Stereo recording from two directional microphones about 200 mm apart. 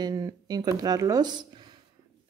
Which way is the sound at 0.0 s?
20° right (ahead or behind).